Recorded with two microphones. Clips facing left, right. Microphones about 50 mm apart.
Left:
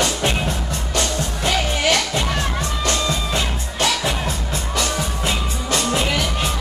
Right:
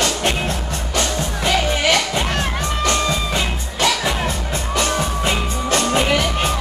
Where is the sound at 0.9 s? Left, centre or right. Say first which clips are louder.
Right 2 dB; right.